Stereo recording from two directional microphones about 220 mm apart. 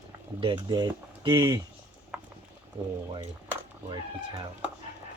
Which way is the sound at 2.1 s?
5° right (ahead or behind).